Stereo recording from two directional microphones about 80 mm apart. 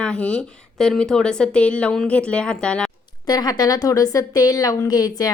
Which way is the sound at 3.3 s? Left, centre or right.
Left.